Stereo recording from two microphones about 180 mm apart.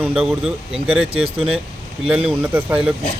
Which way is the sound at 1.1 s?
30° right (ahead or behind).